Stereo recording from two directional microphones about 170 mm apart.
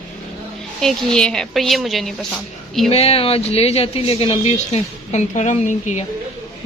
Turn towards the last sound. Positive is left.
turn(degrees=45)  # may be behind; listen again after turning